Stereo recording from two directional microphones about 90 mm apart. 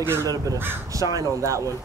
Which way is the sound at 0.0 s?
30° right (ahead or behind).